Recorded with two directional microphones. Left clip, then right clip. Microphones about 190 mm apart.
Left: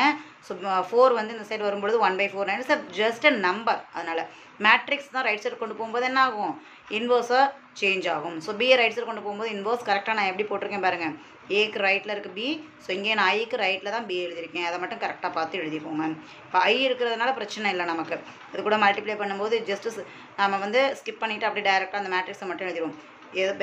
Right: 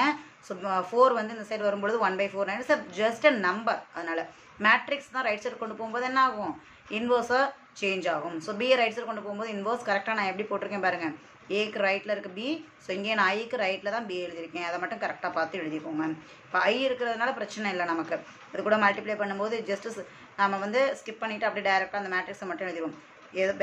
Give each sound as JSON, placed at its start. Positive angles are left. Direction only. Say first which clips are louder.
{"t": 0.0, "sound": "speech", "louder": "left 4 dB", "side_deg": 0}